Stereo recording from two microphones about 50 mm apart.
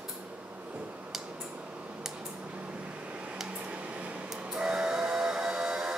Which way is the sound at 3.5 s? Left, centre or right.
Right.